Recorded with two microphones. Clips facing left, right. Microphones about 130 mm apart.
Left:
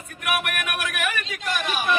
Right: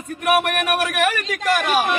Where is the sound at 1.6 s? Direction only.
90° right.